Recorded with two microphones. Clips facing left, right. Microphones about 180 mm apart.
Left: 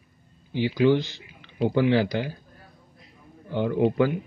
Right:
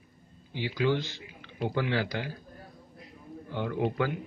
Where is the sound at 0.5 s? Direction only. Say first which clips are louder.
Left 8 dB; 20° left (ahead or behind).